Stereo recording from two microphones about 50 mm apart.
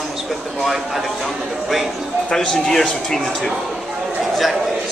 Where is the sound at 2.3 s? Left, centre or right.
Centre.